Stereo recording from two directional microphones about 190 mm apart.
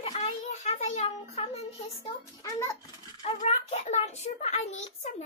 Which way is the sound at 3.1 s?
30° left (ahead or behind).